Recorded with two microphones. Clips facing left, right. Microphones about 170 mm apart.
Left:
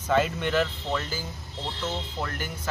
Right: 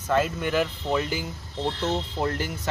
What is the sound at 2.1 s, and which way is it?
Speech, 25° right (ahead or behind).